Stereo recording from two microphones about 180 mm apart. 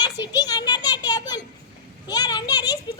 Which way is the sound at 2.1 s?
20° left (ahead or behind).